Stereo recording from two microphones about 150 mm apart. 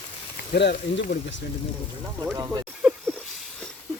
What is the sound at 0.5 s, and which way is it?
Speech, 90° left.